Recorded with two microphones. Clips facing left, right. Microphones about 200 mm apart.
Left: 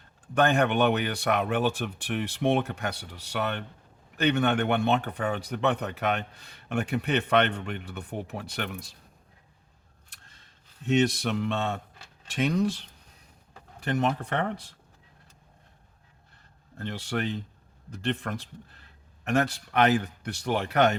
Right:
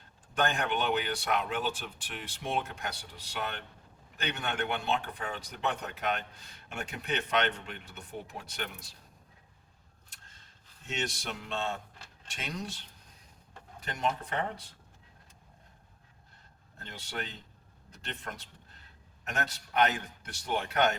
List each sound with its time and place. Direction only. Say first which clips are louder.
0.3 s speech: left 8 dB; 60° left (ahead or behind)
10.8 s speech: left 13 dB; 60° left (ahead or behind)
13.8 s speech: left 7 dB; 60° left (ahead or behind)
16.8 s a man's voice: left 10 dB; 65° left (ahead or behind)